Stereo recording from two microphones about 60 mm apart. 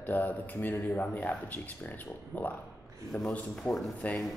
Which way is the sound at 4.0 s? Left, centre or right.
Left.